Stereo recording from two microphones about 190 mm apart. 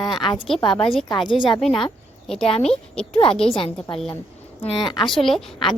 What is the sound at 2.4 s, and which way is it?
A woman's voice, 30° left (ahead or behind).